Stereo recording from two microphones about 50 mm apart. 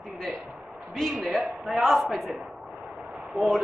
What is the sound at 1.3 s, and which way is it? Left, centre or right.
Speech, right.